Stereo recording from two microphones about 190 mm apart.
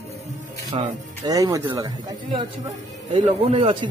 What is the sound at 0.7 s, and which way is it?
Speech, 20° right (ahead or behind).